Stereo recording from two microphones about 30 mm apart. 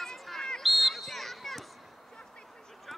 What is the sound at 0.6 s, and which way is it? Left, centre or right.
Basketball bounce, centre.